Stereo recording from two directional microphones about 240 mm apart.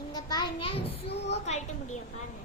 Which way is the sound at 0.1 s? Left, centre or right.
Centre.